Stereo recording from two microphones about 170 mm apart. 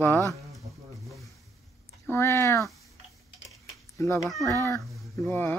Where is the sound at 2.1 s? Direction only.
15° left (ahead or behind).